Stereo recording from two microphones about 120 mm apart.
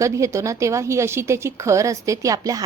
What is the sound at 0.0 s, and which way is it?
A woman's voice, 25° right (ahead or behind).